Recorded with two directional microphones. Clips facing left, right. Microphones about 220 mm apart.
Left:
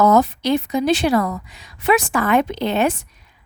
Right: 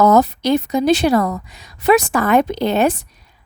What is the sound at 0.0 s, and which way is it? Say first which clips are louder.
A woman's voice: right 2 dB; 40° right (ahead or behind).